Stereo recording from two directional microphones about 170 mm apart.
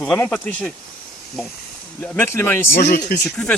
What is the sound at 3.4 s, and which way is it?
Speech, 5° left (ahead or behind).